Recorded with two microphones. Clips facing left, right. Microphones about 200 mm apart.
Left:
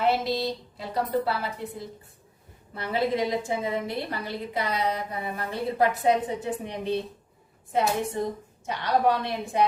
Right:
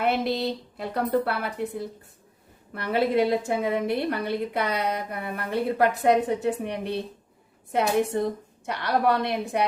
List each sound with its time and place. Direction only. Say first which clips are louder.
0.0 s a woman's voice: even; 60° right (ahead or behind)